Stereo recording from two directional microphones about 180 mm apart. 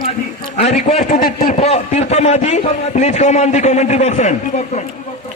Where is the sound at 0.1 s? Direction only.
35° left (ahead or behind).